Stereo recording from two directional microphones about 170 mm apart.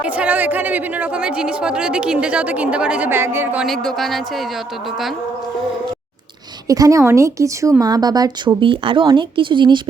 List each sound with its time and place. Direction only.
0.0 s speech: 10° right (ahead or behind)
6.7 s a woman's voice: 20° right (ahead or behind)